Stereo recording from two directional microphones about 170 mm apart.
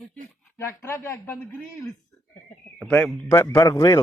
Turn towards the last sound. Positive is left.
turn(degrees=20)  # may be behind; listen again after turning